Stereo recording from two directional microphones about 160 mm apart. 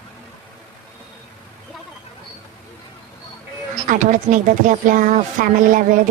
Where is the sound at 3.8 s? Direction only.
50° right (ahead or behind).